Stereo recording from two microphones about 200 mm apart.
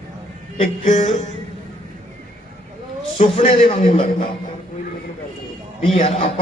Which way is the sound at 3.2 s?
25° left (ahead or behind).